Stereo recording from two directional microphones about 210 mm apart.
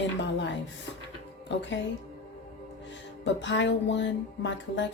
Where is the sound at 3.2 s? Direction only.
60° left (ahead or behind).